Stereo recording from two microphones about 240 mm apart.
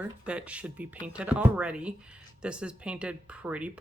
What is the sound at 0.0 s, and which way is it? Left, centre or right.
Speech, centre.